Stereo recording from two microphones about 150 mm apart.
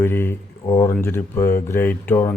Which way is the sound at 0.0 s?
15° left (ahead or behind).